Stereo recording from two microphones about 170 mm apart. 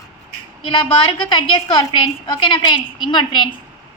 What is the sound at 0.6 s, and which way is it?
A woman's voice, 30° left (ahead or behind).